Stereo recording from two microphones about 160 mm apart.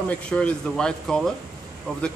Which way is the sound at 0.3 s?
5° left (ahead or behind).